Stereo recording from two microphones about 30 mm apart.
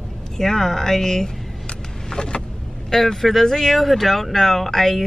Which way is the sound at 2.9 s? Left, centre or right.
Centre.